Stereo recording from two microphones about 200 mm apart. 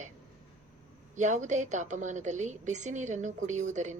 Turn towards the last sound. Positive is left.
turn(degrees=-35)  # may be behind; listen again after turning